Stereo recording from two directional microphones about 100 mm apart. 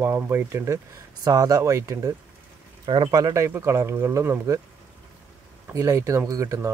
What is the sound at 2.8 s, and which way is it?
Speech, 50° right (ahead or behind).